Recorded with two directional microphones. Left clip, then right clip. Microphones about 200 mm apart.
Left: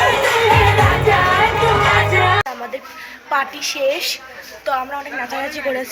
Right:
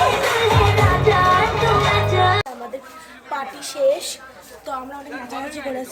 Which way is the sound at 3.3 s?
5° right (ahead or behind).